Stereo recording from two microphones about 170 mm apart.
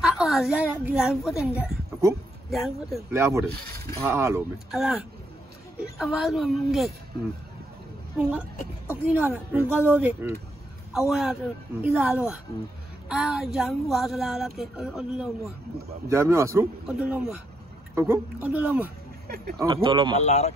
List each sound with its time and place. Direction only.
0.0 s speech: centre (ahead or behind)
2.5 s speech: centre (ahead or behind)
3.1 s a woman's voice: 15° right (ahead or behind)
4.6 s speech: centre (ahead or behind)
8.2 s a woman's voice: 10° right (ahead or behind)
16.1 s a woman's voice: 15° right (ahead or behind)
19.2 s a sound: 60° right (ahead or behind)
19.6 s speech: 30° right (ahead or behind)
20.2 s a man's voice: 40° left (ahead or behind)